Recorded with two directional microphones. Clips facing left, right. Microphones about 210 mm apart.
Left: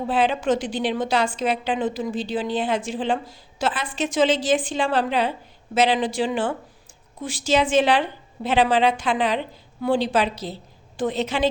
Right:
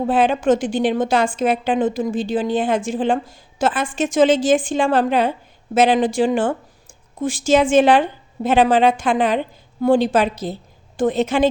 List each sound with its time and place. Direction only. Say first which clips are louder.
0.1 s a woman's voice: right 4 dB; 50° right (ahead or behind)